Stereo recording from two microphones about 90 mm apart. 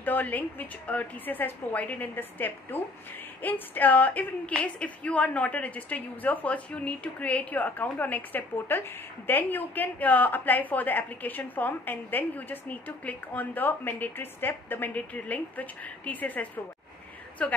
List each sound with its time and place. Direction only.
0.0 s a woman's voice: 20° left (ahead or behind)